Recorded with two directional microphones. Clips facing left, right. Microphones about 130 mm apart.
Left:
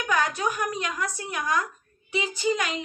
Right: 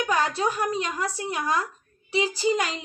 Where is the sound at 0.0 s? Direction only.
30° right (ahead or behind).